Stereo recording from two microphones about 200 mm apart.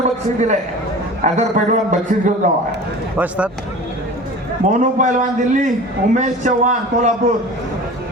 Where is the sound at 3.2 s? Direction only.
5° right (ahead or behind).